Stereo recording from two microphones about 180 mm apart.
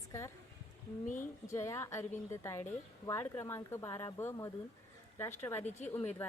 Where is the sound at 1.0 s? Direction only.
45° left (ahead or behind).